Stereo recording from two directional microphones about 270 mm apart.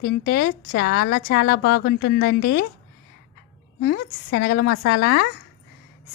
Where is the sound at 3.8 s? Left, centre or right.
Left.